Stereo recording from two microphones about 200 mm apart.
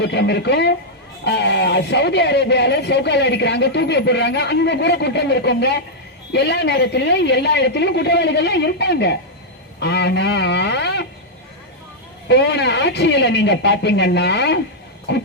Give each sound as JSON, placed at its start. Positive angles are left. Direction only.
{"t": 0.0, "sound": "speech", "side_deg": 60}
{"t": 12.3, "sound": "speech", "side_deg": 60}